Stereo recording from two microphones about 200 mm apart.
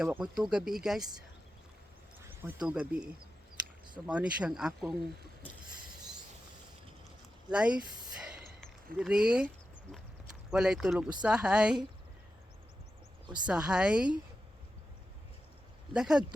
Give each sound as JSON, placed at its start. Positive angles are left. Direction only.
{"t": 0.0, "sound": "speech", "side_deg": -5}
{"t": 2.4, "sound": "speech", "side_deg": -10}
{"t": 7.5, "sound": "speech", "side_deg": -5}
{"t": 9.0, "sound": "speech", "side_deg": -5}
{"t": 10.5, "sound": "speech", "side_deg": -5}
{"t": 13.2, "sound": "speech", "side_deg": -20}
{"t": 13.5, "sound": "speech", "side_deg": -5}
{"t": 15.9, "sound": "speech", "side_deg": -5}